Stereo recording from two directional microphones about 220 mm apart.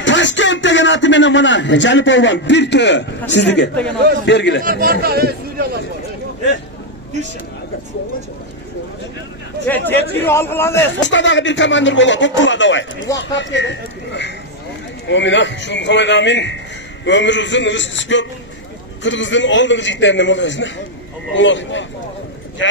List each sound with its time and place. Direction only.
0.0 s speech: 55° left (ahead or behind)
3.7 s a man's voice: 5° left (ahead or behind)
4.3 s speech: 50° left (ahead or behind)
4.6 s speech: 40° right (ahead or behind)
9.7 s a man's voice: 10° left (ahead or behind)
11.0 s speech: 55° left (ahead or behind)